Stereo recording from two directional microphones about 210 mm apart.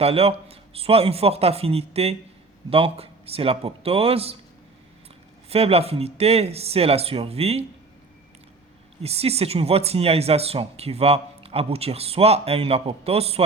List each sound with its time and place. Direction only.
0.0 s speech: 30° right (ahead or behind)
5.5 s speech: 30° right (ahead or behind)
9.0 s speech: 30° right (ahead or behind)